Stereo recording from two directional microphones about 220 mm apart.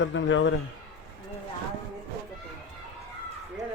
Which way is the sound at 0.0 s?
55° left (ahead or behind).